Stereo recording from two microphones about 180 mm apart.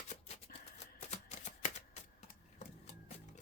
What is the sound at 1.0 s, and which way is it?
Typewriter, 35° left (ahead or behind).